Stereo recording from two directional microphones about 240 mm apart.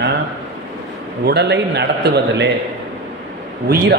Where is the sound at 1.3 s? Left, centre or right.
Right.